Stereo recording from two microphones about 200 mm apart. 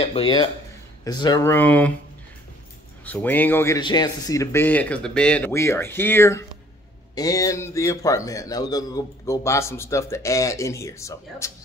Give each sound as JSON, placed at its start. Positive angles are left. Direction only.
{"t": 0.0, "sound": "a man's voice", "side_deg": 30}
{"t": 3.1, "sound": "a man's voice", "side_deg": 10}